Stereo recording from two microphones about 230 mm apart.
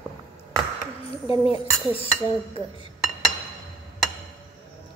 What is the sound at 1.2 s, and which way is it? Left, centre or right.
Speech, left.